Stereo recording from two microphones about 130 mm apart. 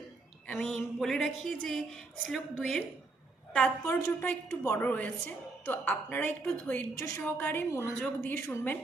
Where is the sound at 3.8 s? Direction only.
15° left (ahead or behind).